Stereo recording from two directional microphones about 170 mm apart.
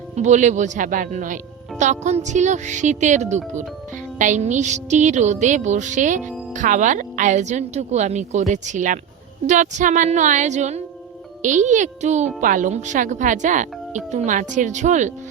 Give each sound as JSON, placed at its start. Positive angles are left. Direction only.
{"t": 0.2, "sound": "a woman's voice", "side_deg": -45}